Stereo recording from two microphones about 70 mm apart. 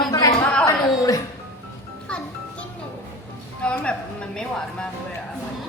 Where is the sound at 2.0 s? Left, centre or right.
Centre.